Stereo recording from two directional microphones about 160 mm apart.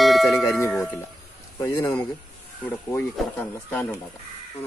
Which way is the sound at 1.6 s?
20° left (ahead or behind).